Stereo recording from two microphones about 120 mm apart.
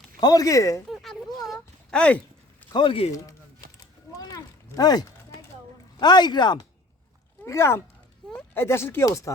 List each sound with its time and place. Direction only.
0.2 s speech: 30° left (ahead or behind)
0.9 s a sound: centre (ahead or behind)
2.7 s speech: 45° left (ahead or behind)
4.1 s a sound: 30° left (ahead or behind)
6.0 s speech: 40° left (ahead or behind)
7.4 s speech: 25° left (ahead or behind)